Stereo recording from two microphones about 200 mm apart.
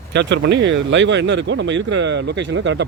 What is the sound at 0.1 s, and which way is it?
A man's voice, 60° right (ahead or behind).